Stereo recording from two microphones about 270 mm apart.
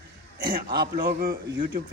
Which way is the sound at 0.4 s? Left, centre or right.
Right.